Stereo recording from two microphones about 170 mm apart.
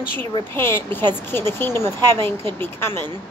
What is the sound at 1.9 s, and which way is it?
Speech, 25° right (ahead or behind).